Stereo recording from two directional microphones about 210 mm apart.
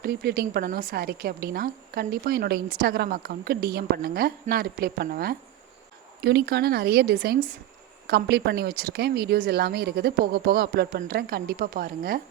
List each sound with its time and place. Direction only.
0.0 s a woman's voice: 45° right (ahead or behind)